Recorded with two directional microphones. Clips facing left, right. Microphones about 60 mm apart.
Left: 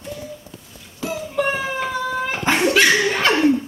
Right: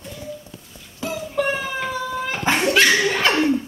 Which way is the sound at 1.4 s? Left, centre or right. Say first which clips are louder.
Left 1 dB; left.